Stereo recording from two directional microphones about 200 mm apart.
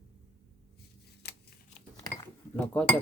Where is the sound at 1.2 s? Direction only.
55° left (ahead or behind).